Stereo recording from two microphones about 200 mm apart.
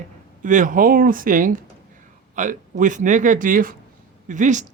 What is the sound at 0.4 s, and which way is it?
Speech, 40° right (ahead or behind).